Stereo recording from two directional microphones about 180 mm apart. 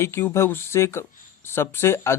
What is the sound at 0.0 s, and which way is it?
Speech, 15° left (ahead or behind).